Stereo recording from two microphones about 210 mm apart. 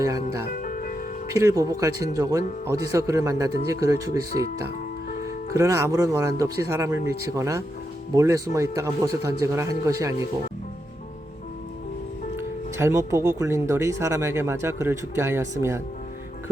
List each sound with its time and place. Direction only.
0.0 s speech: 15° right (ahead or behind)
0.6 s music: 40° left (ahead or behind)
1.3 s speech: 15° right (ahead or behind)
5.5 s speech: 15° right (ahead or behind)
12.4 s speech: 10° right (ahead or behind)